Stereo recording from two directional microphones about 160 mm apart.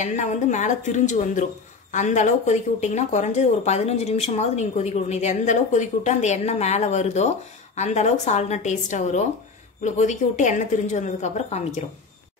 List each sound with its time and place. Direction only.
0.0 s speech: 50° left (ahead or behind)